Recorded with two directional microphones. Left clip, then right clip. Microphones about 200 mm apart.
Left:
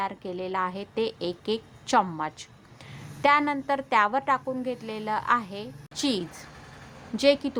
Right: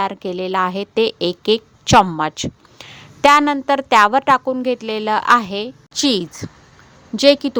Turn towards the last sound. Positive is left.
turn(degrees=-40)  # may be behind; listen again after turning